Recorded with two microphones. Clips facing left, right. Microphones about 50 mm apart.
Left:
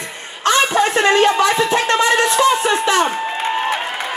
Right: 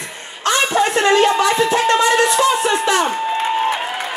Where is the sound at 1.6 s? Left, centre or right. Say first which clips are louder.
Right 1 dB; left.